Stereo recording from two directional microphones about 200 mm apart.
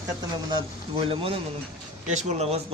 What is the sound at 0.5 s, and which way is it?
A man's voice, 25° right (ahead or behind).